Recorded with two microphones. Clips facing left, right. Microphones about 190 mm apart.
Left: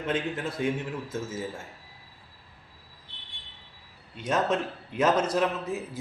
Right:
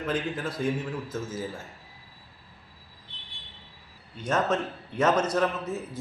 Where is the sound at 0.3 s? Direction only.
25° left (ahead or behind).